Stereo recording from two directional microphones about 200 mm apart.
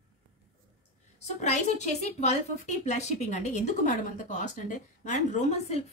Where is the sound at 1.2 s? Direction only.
35° left (ahead or behind).